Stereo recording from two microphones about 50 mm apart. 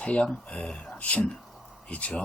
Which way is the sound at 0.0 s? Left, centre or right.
Left.